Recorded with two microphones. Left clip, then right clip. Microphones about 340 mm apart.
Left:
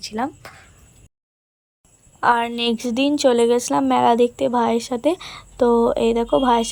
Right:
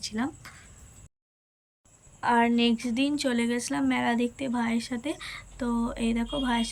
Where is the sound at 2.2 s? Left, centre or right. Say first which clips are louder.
Left 6 dB; centre.